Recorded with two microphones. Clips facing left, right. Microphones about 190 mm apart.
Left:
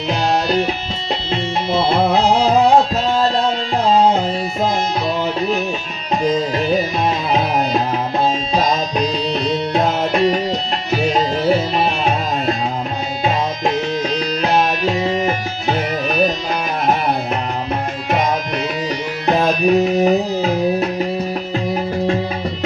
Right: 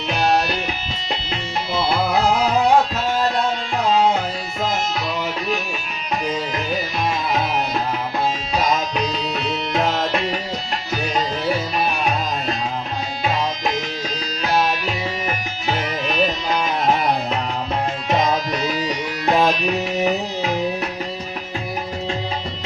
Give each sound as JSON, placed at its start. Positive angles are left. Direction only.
{"t": 1.3, "sound": "music", "side_deg": 25}
{"t": 9.3, "sound": "music", "side_deg": 35}
{"t": 11.1, "sound": "music", "side_deg": 25}
{"t": 14.4, "sound": "music", "side_deg": 20}
{"t": 19.5, "sound": "music", "side_deg": 40}